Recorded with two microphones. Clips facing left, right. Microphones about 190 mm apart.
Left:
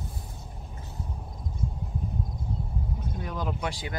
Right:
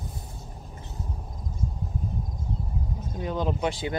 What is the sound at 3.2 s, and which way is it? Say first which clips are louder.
Vehicle: right 6 dB; 25° right (ahead or behind).